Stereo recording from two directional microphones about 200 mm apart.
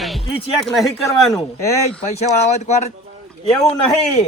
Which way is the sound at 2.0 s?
35° left (ahead or behind).